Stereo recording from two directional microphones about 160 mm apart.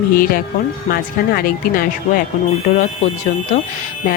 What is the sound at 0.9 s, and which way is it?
Speech, 65° left (ahead or behind).